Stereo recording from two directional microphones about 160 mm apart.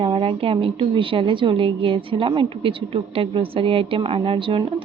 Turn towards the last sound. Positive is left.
turn(degrees=-35)  # may be behind; listen again after turning